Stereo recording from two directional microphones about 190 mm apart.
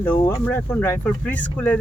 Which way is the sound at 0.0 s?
10° left (ahead or behind).